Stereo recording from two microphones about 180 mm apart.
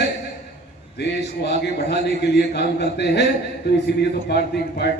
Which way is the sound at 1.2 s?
70° left (ahead or behind).